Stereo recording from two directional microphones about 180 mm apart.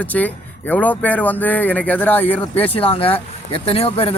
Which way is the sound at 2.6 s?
30° left (ahead or behind).